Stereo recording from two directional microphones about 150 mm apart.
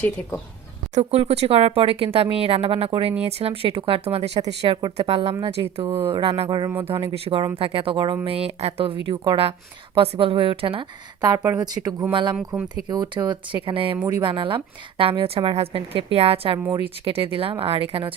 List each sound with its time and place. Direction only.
0.0 s speech: 10° left (ahead or behind)
0.9 s speech: 45° right (ahead or behind)
5.8 s speech: 20° right (ahead or behind)
6.1 s speech: 35° right (ahead or behind); by 12.1 s 20° right (ahead or behind)
12.1 s speech: 30° right (ahead or behind)